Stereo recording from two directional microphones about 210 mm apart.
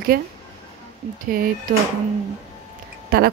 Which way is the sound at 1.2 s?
45° right (ahead or behind).